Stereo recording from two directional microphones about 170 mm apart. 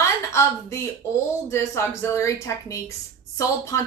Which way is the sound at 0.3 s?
15° left (ahead or behind).